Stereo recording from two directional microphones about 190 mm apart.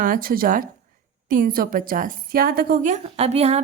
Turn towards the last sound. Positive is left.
turn(degrees=-35)  # may be behind; listen again after turning